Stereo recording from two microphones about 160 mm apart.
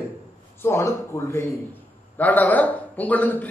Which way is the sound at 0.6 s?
15° left (ahead or behind).